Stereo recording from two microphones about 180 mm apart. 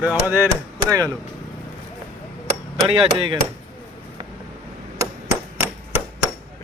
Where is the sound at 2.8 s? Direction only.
30° right (ahead or behind).